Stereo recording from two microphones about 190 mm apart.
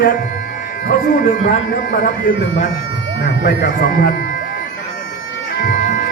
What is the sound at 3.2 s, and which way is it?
Speech, 50° left (ahead or behind).